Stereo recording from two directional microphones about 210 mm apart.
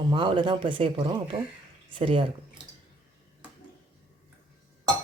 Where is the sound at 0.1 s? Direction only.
25° right (ahead or behind).